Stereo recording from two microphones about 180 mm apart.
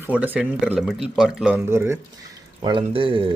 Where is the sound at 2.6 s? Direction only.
25° right (ahead or behind).